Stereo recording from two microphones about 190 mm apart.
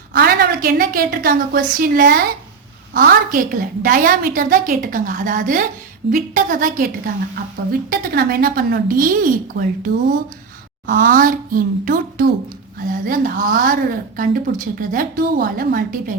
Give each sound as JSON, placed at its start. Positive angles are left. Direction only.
{"t": 0.1, "sound": "a woman's voice", "side_deg": -50}
{"t": 10.9, "sound": "a woman's voice", "side_deg": -45}